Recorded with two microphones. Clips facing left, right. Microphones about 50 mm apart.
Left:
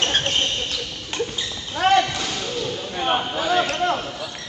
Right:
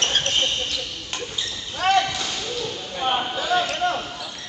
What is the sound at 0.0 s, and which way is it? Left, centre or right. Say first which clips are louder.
Basketball bounce: left 1 dB; centre.